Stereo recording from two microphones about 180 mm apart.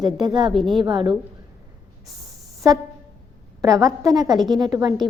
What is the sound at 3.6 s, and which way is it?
A woman's voice, 20° right (ahead or behind).